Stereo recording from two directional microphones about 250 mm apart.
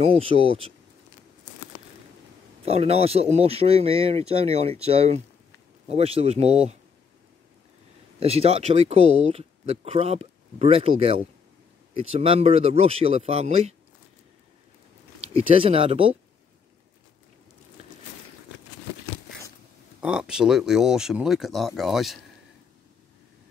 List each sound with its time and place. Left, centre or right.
0.0 s speech: right
2.6 s speech: right
8.2 s speech: right
15.3 s speech: right
20.0 s speech: centre